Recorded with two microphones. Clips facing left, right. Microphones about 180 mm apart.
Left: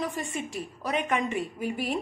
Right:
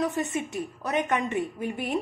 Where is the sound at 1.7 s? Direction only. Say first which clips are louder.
Right 2 dB; 5° left (ahead or behind).